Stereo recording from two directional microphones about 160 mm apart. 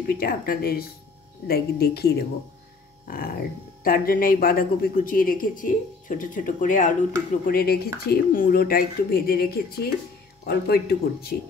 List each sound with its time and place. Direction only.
0.0 s speech: 65° left (ahead or behind)
3.1 s speech: 65° left (ahead or behind)
7.4 s speech: 70° left (ahead or behind)
10.4 s speech: 85° left